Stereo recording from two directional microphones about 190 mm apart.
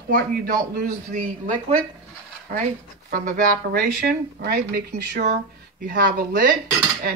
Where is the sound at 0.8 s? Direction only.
45° right (ahead or behind).